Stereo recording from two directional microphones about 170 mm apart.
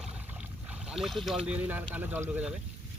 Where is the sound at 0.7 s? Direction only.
Centre (ahead or behind).